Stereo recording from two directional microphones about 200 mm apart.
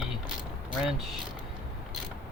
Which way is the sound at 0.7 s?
Centre (ahead or behind).